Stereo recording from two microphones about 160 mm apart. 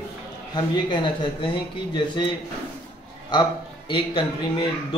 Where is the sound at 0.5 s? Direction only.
30° left (ahead or behind).